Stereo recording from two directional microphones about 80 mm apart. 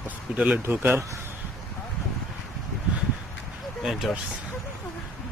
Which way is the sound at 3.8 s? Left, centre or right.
Centre.